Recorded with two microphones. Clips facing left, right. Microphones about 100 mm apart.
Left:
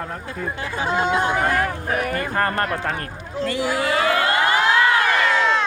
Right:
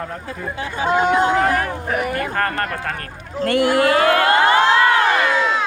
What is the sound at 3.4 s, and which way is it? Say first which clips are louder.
Speech: right 6 dB; 60° right (ahead or behind).